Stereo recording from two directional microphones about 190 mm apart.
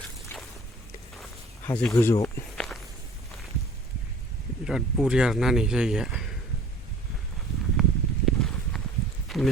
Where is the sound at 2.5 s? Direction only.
5° left (ahead or behind).